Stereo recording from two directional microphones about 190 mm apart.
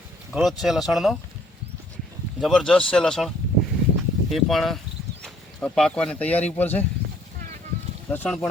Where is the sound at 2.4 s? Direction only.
Centre (ahead or behind).